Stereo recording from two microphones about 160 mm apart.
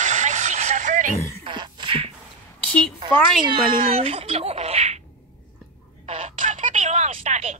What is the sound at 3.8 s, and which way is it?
Speech, 35° right (ahead or behind).